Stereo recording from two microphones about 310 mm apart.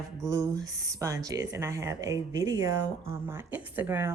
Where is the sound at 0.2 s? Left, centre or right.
Centre.